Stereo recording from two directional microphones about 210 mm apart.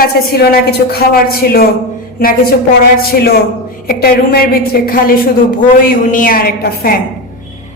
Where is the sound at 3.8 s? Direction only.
45° left (ahead or behind).